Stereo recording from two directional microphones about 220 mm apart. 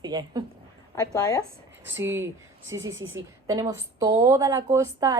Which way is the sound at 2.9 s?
60° right (ahead or behind).